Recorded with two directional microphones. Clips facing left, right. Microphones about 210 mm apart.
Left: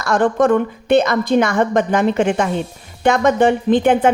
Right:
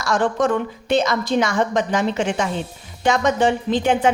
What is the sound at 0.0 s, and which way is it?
A woman's voice, 55° left (ahead or behind).